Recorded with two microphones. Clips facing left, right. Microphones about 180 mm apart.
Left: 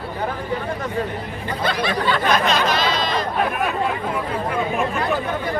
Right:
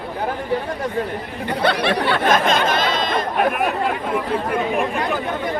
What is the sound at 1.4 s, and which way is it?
Speech, 65° right (ahead or behind).